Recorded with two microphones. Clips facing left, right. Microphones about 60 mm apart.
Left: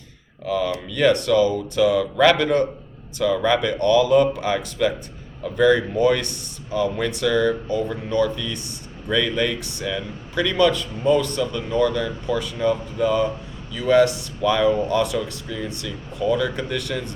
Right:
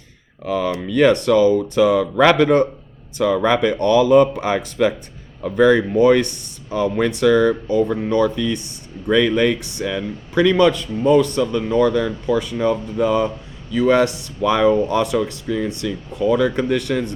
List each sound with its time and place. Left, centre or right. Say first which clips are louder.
0.4 s speech: right 2 dB; right